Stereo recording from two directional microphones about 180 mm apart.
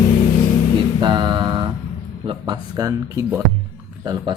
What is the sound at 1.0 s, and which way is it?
Music, 25° right (ahead or behind).